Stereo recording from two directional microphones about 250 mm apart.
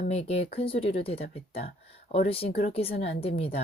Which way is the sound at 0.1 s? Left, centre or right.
Left.